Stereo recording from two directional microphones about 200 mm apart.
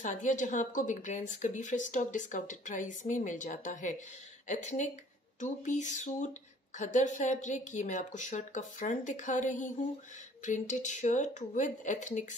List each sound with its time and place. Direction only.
0.0 s speech: 40° left (ahead or behind)